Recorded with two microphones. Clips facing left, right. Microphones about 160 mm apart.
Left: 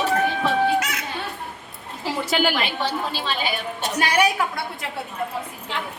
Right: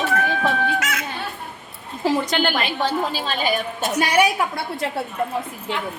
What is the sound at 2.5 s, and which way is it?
A woman's voice, 45° right (ahead or behind).